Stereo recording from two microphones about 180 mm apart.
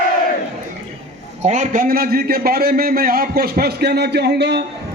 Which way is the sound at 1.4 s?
45° right (ahead or behind).